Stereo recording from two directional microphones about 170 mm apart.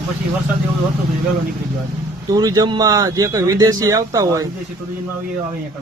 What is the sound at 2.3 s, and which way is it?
A man's voice, 20° right (ahead or behind).